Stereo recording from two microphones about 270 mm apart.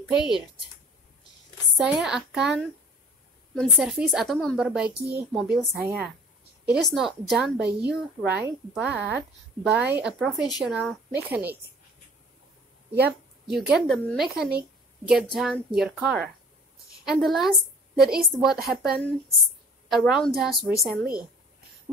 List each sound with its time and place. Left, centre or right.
1.8 s a woman's voice: centre
4.9 s speech: right
5.3 s a woman's voice: centre
13.5 s a woman's voice: centre
20.9 s speech: right